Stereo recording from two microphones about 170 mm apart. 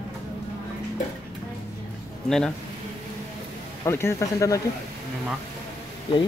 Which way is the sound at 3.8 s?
15° left (ahead or behind).